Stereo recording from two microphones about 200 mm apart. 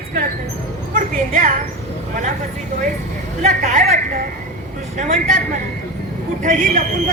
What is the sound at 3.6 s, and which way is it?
A man's voice, 40° right (ahead or behind).